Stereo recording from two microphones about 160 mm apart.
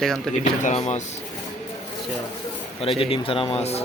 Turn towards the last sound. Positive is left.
turn(degrees=40)  # may be behind; listen again after turning